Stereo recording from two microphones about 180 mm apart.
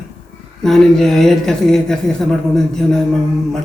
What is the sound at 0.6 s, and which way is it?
Speech, centre (ahead or behind).